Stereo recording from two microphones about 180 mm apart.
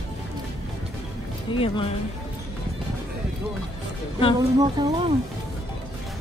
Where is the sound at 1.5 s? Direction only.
30° left (ahead or behind).